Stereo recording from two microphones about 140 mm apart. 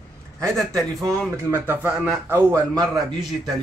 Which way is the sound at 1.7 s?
10° right (ahead or behind).